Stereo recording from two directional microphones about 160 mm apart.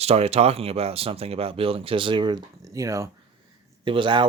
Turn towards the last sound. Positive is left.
turn(degrees=-30)  # may be behind; listen again after turning